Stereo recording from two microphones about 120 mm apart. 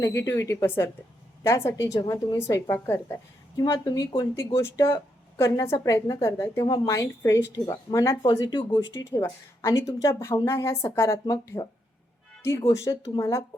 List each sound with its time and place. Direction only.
0.0 s a woman's voice: 25° left (ahead or behind)
3.8 s speech: 35° left (ahead or behind)
4.4 s a woman's voice: 25° left (ahead or behind)
7.5 s speech: 35° left (ahead or behind)
7.9 s a woman's voice: 25° left (ahead or behind)
8.2 s speech: 40° left (ahead or behind)
9.0 s a woman's voice: 25° left (ahead or behind)